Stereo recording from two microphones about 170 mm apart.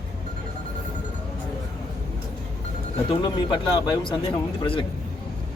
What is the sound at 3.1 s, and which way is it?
Speech, 25° left (ahead or behind).